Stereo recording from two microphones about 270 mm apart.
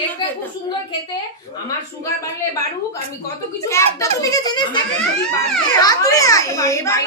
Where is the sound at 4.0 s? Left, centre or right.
Centre.